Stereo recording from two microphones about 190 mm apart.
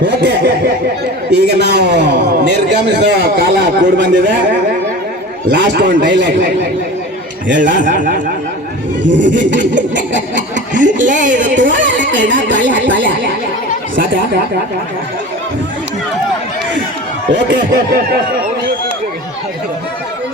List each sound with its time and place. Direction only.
0.0 s a man's voice: 60° right (ahead or behind)
5.5 s speech: 65° right (ahead or behind)
7.8 s speech: 45° right (ahead or behind)
9.0 s speech: 70° right (ahead or behind)
10.5 s speech: 40° right (ahead or behind)
11.7 s speech: 75° right (ahead or behind)
17.3 s a man's voice: 65° right (ahead or behind)